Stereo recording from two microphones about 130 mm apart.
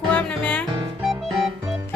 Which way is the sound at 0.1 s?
10° left (ahead or behind).